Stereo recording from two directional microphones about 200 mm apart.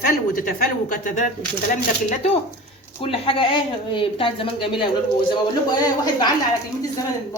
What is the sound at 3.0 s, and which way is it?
A woman's voice, 25° left (ahead or behind).